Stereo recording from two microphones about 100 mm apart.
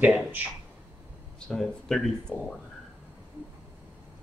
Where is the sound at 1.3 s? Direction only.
5° left (ahead or behind).